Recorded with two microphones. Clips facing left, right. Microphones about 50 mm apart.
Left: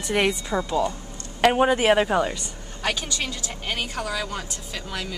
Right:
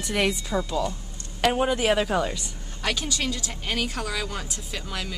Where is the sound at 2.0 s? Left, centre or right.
Centre.